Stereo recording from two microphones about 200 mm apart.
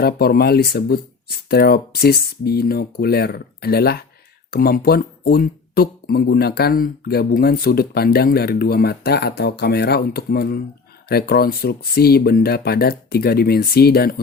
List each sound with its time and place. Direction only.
0.0 s speech: 50° left (ahead or behind)